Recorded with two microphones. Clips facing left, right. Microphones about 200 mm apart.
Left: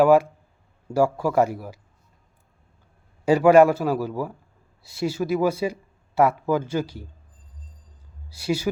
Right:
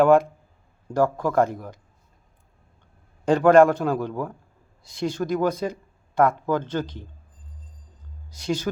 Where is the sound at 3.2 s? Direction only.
10° left (ahead or behind).